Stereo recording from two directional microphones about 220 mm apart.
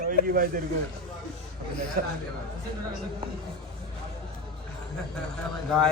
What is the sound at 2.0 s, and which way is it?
Speech, 40° right (ahead or behind).